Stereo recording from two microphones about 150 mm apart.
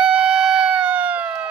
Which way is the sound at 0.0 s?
5° right (ahead or behind).